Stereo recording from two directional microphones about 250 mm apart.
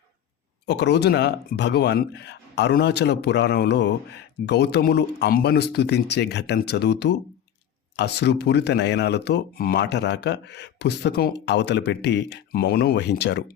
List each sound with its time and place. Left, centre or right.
0.7 s a man's voice: left